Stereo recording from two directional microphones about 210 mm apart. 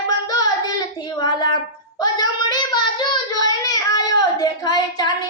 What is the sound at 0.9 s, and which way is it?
Child singing, 20° left (ahead or behind).